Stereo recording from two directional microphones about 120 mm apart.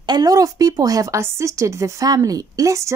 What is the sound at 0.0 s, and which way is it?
Speech, 35° right (ahead or behind).